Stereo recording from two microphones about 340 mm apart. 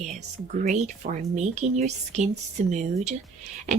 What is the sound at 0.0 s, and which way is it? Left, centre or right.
Speech, right.